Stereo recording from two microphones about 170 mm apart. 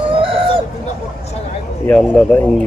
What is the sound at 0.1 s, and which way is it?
Chicken, 30° right (ahead or behind).